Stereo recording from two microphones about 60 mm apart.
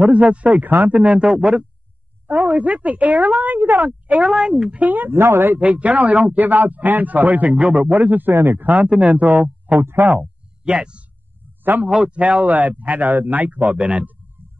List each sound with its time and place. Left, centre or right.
0.0 s a man's voice: right
2.2 s a man's voice: right
4.2 s a man's voice: centre; by 5.6 s right
5.6 s a man's voice: right
9.8 s speech: right
10.0 s speech: centre
12.2 s a man's voice: right